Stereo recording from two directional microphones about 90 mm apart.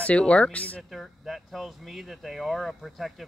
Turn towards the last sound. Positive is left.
turn(degrees=0)  # may be behind; listen again after turning